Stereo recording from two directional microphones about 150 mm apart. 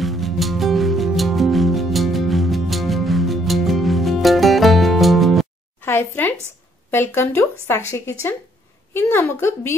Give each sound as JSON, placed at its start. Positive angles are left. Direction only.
{"t": 0.0, "sound": "music", "side_deg": 0}
{"t": 5.8, "sound": "a sound", "side_deg": 15}
{"t": 6.9, "sound": "a woman's voice", "side_deg": 15}